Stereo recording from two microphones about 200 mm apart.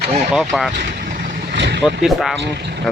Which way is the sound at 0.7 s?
55° right (ahead or behind).